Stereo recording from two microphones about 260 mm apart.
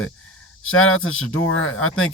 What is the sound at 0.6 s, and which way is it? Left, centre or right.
Speech, left.